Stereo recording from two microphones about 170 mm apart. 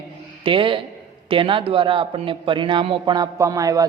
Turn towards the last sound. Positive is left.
turn(degrees=-20)  # may be behind; listen again after turning